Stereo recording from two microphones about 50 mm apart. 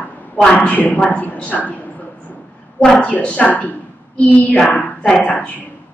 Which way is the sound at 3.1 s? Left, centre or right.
Left.